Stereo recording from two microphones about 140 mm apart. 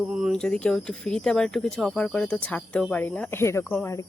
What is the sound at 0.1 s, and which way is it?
Speech, centre (ahead or behind).